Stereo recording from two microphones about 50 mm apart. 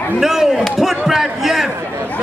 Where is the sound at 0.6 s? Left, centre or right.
Centre.